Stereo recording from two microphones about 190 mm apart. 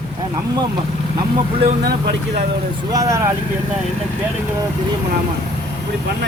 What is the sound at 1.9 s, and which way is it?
Speech, 60° right (ahead or behind).